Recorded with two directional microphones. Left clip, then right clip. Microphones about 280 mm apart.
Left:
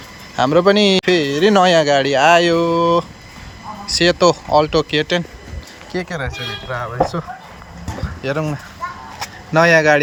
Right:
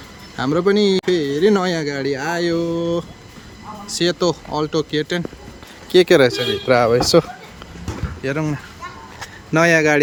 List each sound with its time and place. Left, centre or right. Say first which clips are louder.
0.3 s speech: left 4 dB; centre
5.9 s speech: right 12 dB; right
6.7 s speech: right 15 dB; right
8.2 s speech: left 1 dB; centre